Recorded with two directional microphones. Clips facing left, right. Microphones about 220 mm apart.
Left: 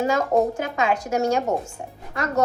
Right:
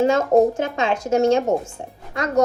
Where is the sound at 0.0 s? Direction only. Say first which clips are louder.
Right 5 dB; 25° right (ahead or behind).